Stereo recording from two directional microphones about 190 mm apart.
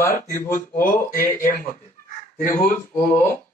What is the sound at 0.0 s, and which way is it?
Speech, 10° left (ahead or behind).